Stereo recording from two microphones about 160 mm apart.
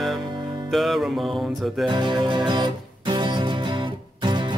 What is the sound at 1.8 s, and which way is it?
Music, 30° right (ahead or behind).